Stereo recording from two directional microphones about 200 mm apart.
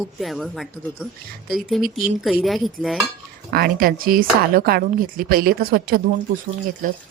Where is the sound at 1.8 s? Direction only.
45° right (ahead or behind).